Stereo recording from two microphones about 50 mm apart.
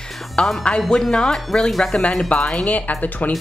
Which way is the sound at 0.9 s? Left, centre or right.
Centre.